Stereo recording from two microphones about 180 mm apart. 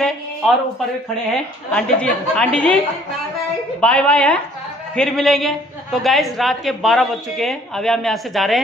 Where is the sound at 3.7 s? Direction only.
5° left (ahead or behind).